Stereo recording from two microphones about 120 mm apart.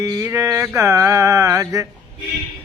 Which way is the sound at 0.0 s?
25° right (ahead or behind).